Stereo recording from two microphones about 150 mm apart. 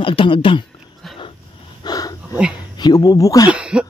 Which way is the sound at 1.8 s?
25° left (ahead or behind).